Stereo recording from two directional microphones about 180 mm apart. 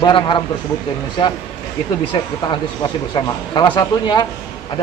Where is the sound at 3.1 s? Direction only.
25° left (ahead or behind).